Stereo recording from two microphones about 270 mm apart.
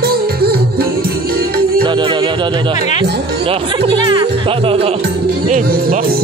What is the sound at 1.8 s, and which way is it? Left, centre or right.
Music, centre.